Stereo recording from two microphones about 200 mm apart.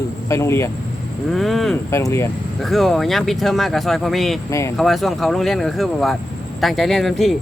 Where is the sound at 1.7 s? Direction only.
15° left (ahead or behind).